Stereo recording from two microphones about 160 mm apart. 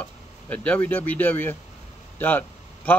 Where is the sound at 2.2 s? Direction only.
10° left (ahead or behind).